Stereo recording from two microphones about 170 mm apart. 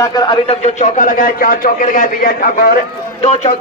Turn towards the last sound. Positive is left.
turn(degrees=40)  # may be behind; listen again after turning